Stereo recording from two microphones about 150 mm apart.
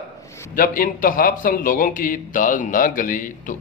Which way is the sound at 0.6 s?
70° left (ahead or behind).